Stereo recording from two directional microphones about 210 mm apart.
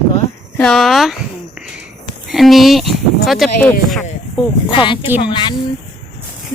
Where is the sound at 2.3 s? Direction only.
Centre (ahead or behind).